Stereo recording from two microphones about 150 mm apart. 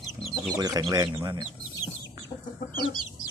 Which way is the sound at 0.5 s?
25° right (ahead or behind).